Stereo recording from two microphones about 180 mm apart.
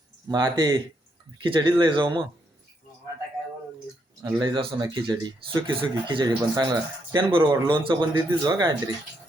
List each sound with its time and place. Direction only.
0.3 s speech: 25° right (ahead or behind)
4.2 s speech: 20° right (ahead or behind)